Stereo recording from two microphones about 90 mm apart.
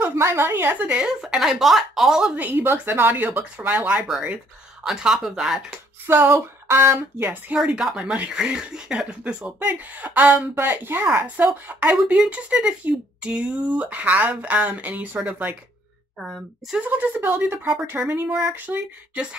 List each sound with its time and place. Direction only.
0.0 s speech: 30° right (ahead or behind); by 2.3 s 5° right (ahead or behind)
2.3 s speech: 20° right (ahead or behind)
4.8 s speech: 5° right (ahead or behind)
6.0 s speech: 25° right (ahead or behind)
7.5 s speech: 10° right (ahead or behind)
16.2 s speech: centre (ahead or behind)
16.7 s speech: 15° right (ahead or behind)